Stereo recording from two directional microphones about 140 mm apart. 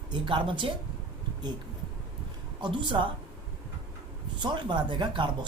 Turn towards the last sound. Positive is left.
turn(degrees=-35)  # may be behind; listen again after turning